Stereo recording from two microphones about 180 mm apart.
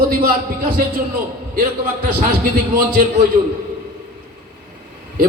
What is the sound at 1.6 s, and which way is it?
A man's voice, 55° right (ahead or behind).